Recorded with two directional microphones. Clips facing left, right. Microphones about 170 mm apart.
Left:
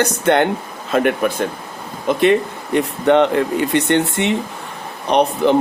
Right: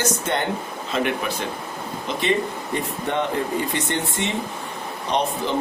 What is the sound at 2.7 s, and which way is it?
Speech, 75° left (ahead or behind).